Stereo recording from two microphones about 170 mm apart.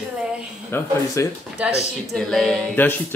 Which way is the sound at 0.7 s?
15° left (ahead or behind).